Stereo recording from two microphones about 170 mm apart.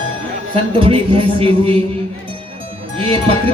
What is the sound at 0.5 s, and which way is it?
Speech, 30° right (ahead or behind).